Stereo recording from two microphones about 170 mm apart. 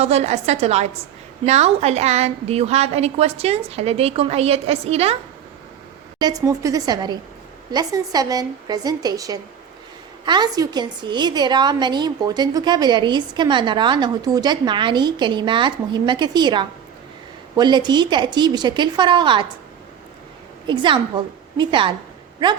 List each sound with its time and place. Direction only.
0.0 s a woman's voice: 40° right (ahead or behind)
6.1 s a woman's voice: 20° right (ahead or behind)
20.7 s a woman's voice: 30° right (ahead or behind)